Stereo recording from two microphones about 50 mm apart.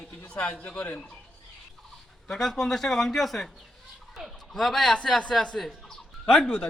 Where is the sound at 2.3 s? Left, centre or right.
Centre.